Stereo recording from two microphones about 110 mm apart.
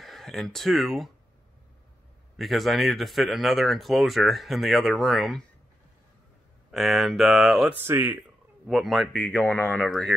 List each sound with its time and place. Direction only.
0.0 s speech: 5° left (ahead or behind)
2.3 s speech: centre (ahead or behind)
6.7 s speech: centre (ahead or behind)
7.7 s speech: 20° right (ahead or behind)
8.6 s speech: centre (ahead or behind)
9.1 s speech: 15° left (ahead or behind)
9.8 s speech: centre (ahead or behind)